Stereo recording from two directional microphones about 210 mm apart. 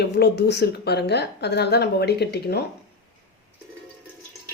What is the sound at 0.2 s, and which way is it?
Speech, 50° left (ahead or behind).